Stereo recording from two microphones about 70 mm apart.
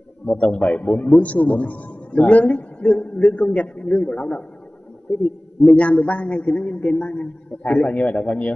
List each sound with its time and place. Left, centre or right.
0.3 s a man's voice: centre
5.7 s a man's voice: centre